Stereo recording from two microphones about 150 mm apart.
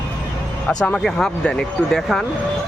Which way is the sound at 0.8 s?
5° left (ahead or behind).